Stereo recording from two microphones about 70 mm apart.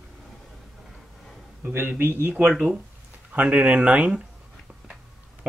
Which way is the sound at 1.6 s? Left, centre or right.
Right.